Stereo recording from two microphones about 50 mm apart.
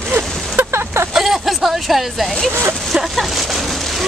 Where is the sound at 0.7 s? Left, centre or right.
Right.